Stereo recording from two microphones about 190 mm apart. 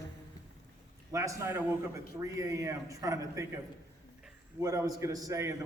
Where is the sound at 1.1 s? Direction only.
15° right (ahead or behind).